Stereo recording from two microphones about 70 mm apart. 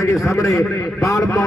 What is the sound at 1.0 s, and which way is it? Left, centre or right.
Speech, left.